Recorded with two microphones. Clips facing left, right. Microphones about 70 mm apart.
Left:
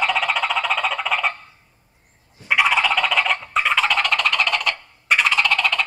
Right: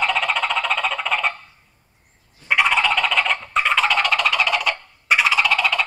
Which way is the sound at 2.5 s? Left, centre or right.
Centre.